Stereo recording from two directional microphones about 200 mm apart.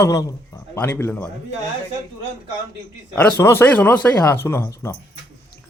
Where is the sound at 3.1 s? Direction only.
10° left (ahead or behind).